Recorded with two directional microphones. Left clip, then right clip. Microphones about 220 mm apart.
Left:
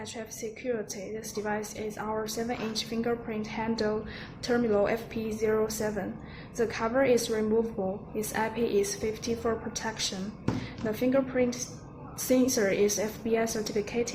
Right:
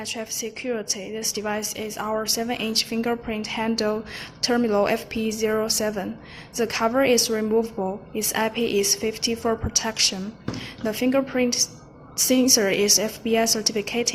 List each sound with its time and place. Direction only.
0.0 s a woman's voice: 20° right (ahead or behind)